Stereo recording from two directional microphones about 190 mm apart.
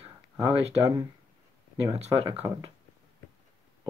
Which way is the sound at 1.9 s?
30° right (ahead or behind).